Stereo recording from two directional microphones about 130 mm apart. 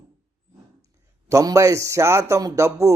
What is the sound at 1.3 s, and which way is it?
A man's voice, 25° right (ahead or behind).